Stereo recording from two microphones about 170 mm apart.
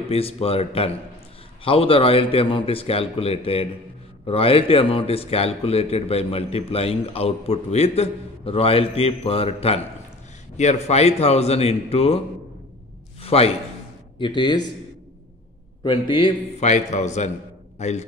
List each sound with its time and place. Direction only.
0.1 s a man's voice: 35° left (ahead or behind)
13.2 s a sound: 35° left (ahead or behind)
14.1 s a man's voice: 30° left (ahead or behind)
15.8 s a man's voice: 30° left (ahead or behind)
16.5 s a man's voice: 45° left (ahead or behind)